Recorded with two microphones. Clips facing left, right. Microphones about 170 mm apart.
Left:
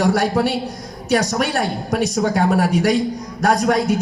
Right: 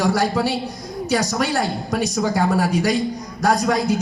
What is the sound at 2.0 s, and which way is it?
Speech, 65° left (ahead or behind).